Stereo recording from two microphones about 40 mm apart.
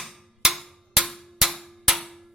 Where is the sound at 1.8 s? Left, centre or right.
Centre.